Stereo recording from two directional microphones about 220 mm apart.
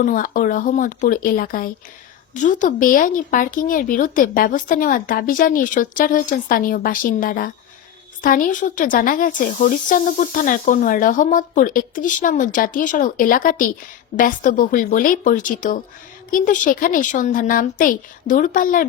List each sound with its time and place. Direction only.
0.0 s speech: 40° left (ahead or behind)